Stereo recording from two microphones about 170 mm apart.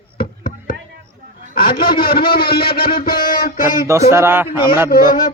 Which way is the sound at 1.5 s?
60° left (ahead or behind).